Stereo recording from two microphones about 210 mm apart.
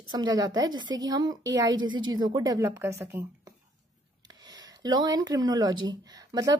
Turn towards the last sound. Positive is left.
turn(degrees=-20)  # may be behind; listen again after turning